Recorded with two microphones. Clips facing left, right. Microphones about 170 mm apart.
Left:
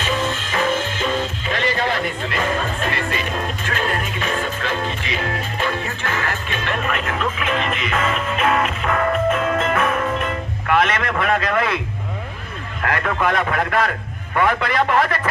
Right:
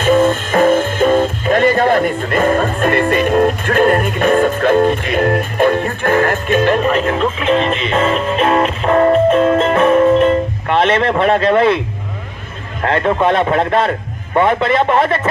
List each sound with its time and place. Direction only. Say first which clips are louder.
0.0 s speech: right 11 dB; 50° right (ahead or behind); by 11.8 s 30° right (ahead or behind)
12.8 s speech: right 7 dB; 30° right (ahead or behind)